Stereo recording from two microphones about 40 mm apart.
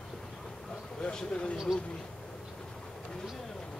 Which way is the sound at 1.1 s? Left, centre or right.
Left.